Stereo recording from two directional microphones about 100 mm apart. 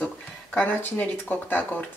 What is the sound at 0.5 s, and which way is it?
Speech, 20° left (ahead or behind).